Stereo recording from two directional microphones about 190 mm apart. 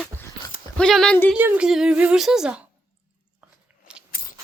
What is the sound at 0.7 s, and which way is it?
Speech, 5° left (ahead or behind).